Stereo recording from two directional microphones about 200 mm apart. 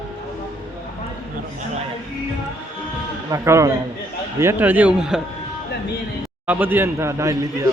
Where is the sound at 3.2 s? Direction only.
15° right (ahead or behind).